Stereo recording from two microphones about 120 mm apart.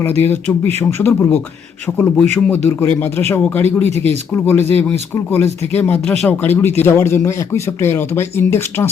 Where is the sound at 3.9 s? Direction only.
65° right (ahead or behind).